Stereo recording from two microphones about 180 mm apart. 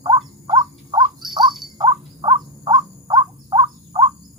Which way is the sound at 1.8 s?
25° right (ahead or behind).